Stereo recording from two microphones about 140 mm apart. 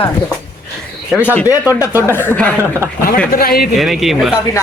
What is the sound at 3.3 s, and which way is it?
Speech, 90° left.